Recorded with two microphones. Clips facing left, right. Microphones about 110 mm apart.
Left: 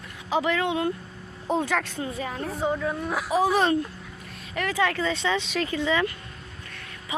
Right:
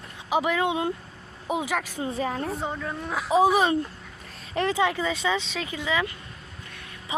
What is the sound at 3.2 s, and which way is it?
Speech, 20° right (ahead or behind).